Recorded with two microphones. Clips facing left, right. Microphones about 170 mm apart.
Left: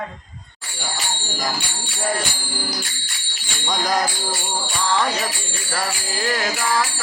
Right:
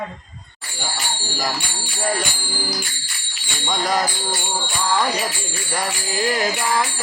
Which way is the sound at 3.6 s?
Centre (ahead or behind).